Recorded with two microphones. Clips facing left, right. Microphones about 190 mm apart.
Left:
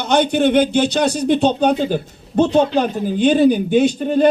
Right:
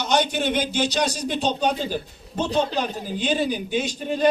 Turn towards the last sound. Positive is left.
turn(degrees=55)  # may be behind; listen again after turning